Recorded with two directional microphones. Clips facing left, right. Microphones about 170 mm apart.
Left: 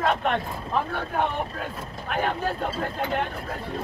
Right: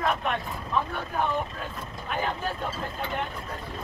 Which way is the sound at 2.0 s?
60° left (ahead or behind).